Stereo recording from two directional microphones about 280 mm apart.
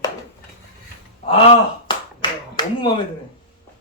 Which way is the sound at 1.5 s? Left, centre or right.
Centre.